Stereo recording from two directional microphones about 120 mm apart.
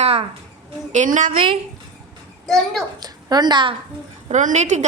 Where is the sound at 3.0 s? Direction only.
35° right (ahead or behind).